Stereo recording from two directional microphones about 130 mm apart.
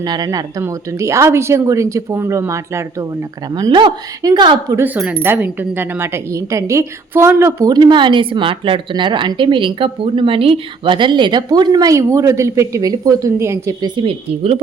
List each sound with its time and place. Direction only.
0.0 s speech: 30° right (ahead or behind)
3.5 s speech: 35° right (ahead or behind)
5.2 s speech: 15° right (ahead or behind)
7.7 s speech: 35° right (ahead or behind)
13.8 s a woman's voice: 40° right (ahead or behind)